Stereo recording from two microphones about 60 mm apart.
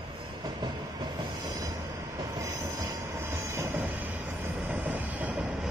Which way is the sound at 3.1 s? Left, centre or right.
Right.